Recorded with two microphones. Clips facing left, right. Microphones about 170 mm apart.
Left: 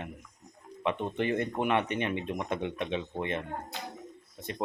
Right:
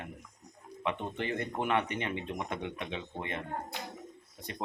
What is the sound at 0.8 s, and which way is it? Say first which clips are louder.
Speech: left 4 dB; 20° left (ahead or behind).